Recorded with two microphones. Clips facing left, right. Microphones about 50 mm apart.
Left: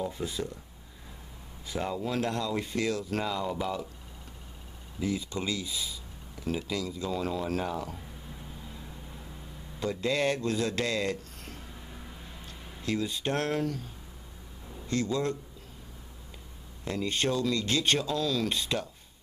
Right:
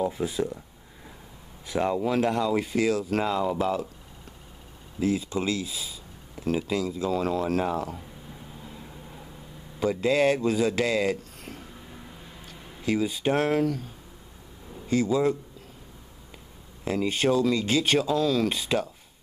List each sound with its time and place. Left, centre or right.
0.0 s speech: centre
1.8 s speech: centre
5.0 s speech: centre
7.7 s a sound: centre
9.8 s speech: centre
16.8 s speech: centre